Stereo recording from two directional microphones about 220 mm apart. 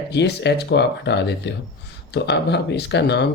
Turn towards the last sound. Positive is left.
turn(degrees=50)  # may be behind; listen again after turning